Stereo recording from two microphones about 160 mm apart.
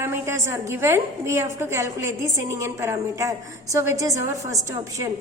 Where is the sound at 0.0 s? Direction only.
15° right (ahead or behind).